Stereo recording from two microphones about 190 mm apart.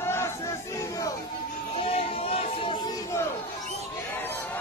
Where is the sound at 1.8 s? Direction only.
30° left (ahead or behind).